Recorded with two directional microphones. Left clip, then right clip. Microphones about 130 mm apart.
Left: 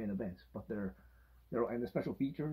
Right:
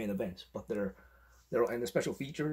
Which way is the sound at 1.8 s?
10° right (ahead or behind).